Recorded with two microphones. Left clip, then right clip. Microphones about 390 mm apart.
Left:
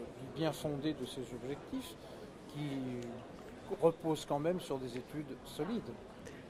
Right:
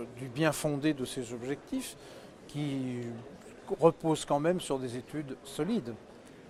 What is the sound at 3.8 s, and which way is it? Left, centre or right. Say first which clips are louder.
Speech: right 6 dB; right.